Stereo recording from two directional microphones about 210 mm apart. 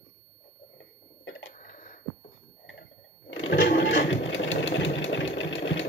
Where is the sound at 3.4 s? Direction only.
60° left (ahead or behind).